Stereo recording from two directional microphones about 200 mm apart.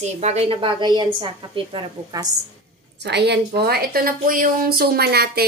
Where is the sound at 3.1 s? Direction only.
55° right (ahead or behind).